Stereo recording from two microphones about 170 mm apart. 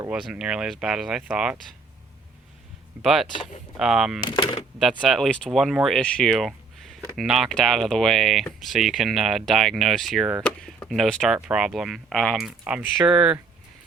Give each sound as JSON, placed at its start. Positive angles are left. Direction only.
{"t": 0.1, "sound": "speech", "side_deg": -5}
{"t": 3.0, "sound": "speech", "side_deg": 0}
{"t": 4.3, "sound": "speech", "side_deg": 30}
{"t": 4.8, "sound": "speech", "side_deg": 0}